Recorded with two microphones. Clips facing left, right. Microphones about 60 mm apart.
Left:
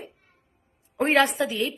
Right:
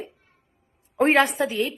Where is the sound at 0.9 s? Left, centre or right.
Right.